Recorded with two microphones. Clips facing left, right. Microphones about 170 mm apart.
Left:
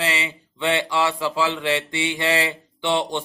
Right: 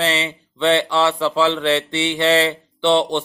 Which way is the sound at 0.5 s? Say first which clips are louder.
Right 5 dB; 15° left (ahead or behind).